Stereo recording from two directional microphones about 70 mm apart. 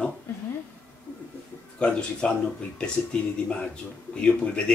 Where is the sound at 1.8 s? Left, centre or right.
Centre.